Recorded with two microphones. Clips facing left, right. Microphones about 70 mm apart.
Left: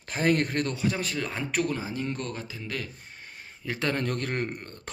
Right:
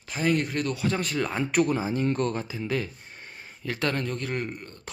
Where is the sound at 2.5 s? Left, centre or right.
Centre.